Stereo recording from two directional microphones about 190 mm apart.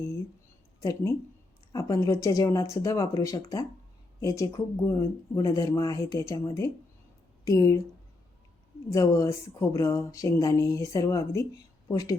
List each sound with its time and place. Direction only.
0.8 s speech: 20° left (ahead or behind)
8.9 s a woman's voice: 15° left (ahead or behind)